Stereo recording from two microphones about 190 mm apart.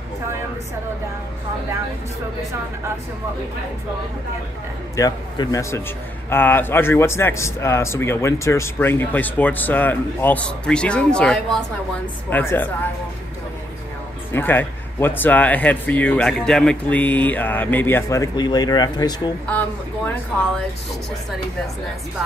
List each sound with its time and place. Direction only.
4.9 s a man's voice: 20° left (ahead or behind)
14.3 s a man's voice: 10° left (ahead or behind)